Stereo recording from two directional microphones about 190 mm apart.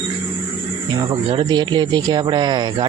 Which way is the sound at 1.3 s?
25° right (ahead or behind).